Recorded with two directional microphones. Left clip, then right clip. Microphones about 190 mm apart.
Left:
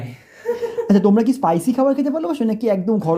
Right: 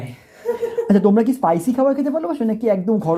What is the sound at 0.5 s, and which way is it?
Speech, 5° left (ahead or behind).